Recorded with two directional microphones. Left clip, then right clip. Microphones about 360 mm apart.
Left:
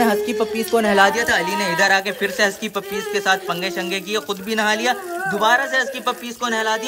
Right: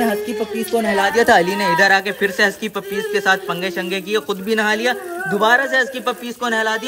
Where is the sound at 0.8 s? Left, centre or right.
Centre.